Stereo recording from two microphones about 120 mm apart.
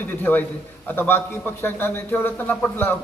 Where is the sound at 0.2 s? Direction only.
15° left (ahead or behind).